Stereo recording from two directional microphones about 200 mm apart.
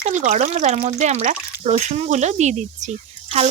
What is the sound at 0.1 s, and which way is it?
Speech, 35° right (ahead or behind).